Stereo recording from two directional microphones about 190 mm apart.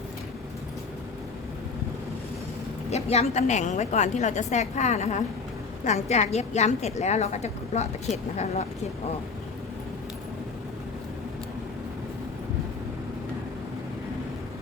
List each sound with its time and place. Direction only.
2.9 s a woman's voice: 35° left (ahead or behind)